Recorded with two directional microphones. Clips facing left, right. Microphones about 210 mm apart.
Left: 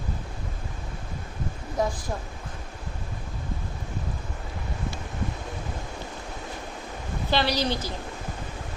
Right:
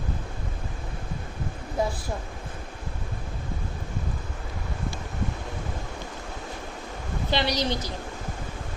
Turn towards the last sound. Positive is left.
turn(degrees=-20)  # may be behind; listen again after turning